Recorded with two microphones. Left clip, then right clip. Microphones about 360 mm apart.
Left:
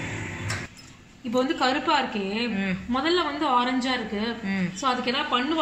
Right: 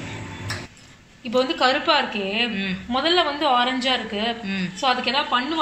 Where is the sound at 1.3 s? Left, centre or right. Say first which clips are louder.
Right 4 dB; centre.